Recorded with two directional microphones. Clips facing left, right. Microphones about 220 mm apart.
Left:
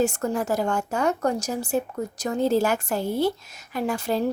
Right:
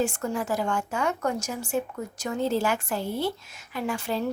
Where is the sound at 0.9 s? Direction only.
40° left (ahead or behind).